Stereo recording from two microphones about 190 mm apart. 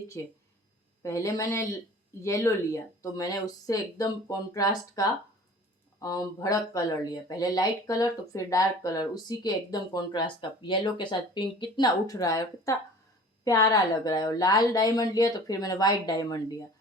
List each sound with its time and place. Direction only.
0.2 s a man's voice: 15° left (ahead or behind)